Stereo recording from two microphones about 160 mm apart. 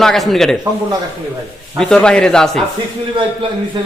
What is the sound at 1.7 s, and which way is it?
Speech, 5° left (ahead or behind).